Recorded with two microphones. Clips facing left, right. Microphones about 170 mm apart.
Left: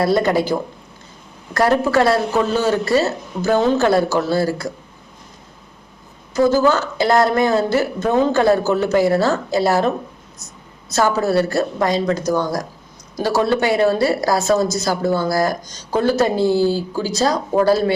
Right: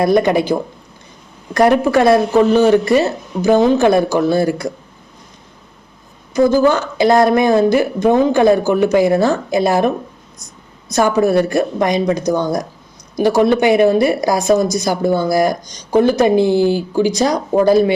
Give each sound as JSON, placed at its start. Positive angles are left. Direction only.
{"t": 0.0, "sound": "speech", "side_deg": -20}
{"t": 1.5, "sound": "a woman's voice", "side_deg": -15}
{"t": 6.3, "sound": "a woman's voice", "side_deg": -15}